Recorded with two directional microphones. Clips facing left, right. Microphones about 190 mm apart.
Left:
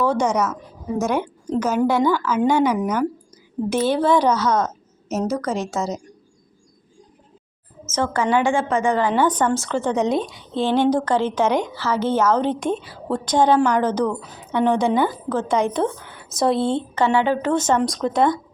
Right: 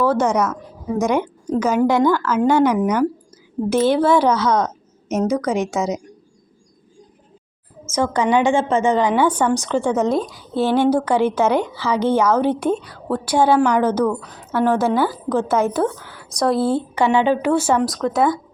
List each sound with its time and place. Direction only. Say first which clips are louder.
0.0 s a woman's voice: right 2 dB; 15° left (ahead or behind)
1.6 s a woman's voice: right 3 dB; 10° right (ahead or behind)
2.0 s a woman's voice: right 2 dB; 10° left (ahead or behind)
3.8 s a woman's voice: right 2 dB; 10° right (ahead or behind)
4.5 s a sound: right 2 dB; 5° left (ahead or behind)
5.7 s a woman's voice: right 3 dB; centre (ahead or behind)
7.9 s a woman's voice: right 2 dB; 15° right (ahead or behind)
9.9 s a woman's voice: right 2 dB; centre (ahead or behind)